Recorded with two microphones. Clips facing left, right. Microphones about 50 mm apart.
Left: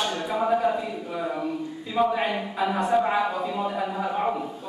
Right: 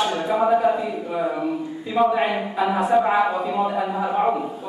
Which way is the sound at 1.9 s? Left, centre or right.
Centre.